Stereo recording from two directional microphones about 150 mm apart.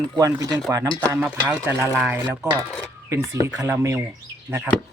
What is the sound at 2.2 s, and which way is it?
Speech, 25° right (ahead or behind).